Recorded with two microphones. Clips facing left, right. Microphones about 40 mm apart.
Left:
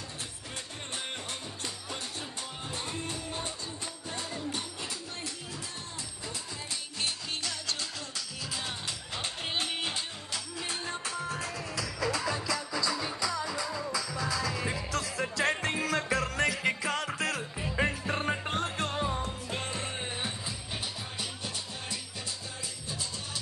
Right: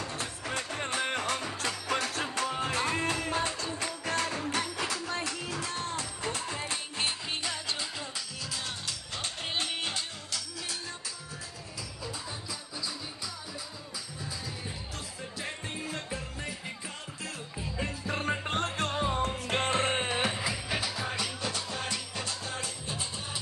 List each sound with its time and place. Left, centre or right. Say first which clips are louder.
1.6 s music: right 8 dB; right
11.7 s music: left 8 dB; left
18.6 s music: right 1 dB; right
19.2 s music: right 6 dB; right